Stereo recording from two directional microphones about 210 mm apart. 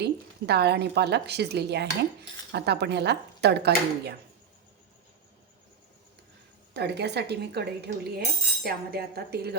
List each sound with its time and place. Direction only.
0.0 s a woman's voice: 50° right (ahead or behind)
6.7 s speech: 50° right (ahead or behind)